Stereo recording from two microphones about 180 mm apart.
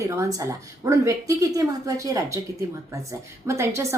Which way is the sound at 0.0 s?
20° right (ahead or behind).